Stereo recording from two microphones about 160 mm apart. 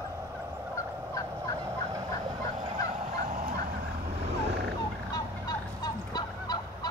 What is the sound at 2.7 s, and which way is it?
Fowl, 55° right (ahead or behind).